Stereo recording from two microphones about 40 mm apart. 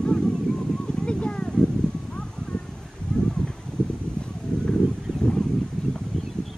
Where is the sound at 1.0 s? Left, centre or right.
Left.